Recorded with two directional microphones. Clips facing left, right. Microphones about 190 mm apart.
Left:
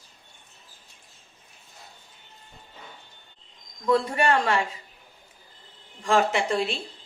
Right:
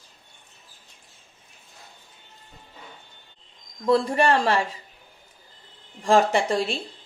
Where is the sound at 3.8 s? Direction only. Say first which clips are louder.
Right 2 dB; 35° right (ahead or behind).